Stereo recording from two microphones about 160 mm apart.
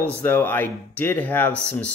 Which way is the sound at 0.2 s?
10° left (ahead or behind).